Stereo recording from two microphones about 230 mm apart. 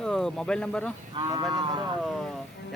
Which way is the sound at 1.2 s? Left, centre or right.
Centre.